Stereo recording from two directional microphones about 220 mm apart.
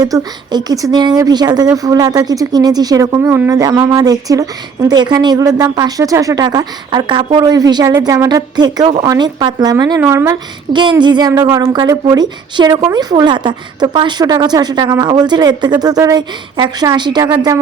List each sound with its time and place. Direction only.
0.0 s speech: 15° right (ahead or behind)